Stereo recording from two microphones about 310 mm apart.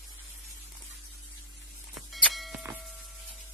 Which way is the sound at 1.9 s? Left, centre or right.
Centre.